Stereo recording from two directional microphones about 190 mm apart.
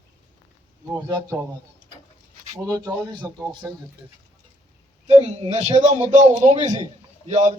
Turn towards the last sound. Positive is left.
turn(degrees=-40)  # may be behind; listen again after turning